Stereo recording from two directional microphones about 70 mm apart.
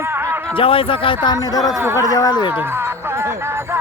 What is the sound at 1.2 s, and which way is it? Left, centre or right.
Speech, left.